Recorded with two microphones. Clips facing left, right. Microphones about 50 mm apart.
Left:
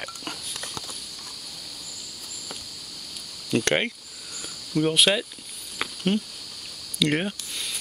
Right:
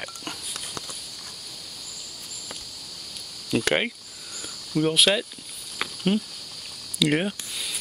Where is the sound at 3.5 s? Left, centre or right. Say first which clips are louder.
Even; centre.